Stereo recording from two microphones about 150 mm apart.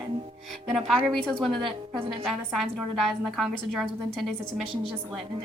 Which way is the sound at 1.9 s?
35° right (ahead or behind).